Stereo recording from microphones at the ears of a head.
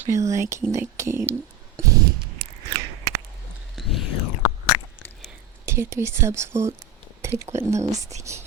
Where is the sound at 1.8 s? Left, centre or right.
Right.